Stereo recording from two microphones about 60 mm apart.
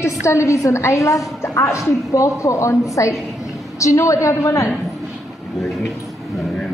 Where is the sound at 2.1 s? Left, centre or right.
Left.